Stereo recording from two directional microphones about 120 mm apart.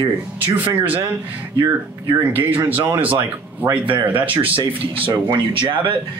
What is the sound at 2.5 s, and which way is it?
Speech, 15° right (ahead or behind).